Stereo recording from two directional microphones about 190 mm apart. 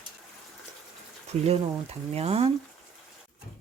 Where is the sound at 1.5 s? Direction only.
30° right (ahead or behind).